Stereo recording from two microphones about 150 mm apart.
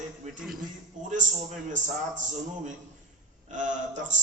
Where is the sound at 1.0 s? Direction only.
50° right (ahead or behind).